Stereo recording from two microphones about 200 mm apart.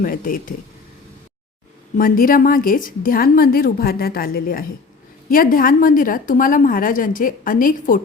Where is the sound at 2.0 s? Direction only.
45° left (ahead or behind).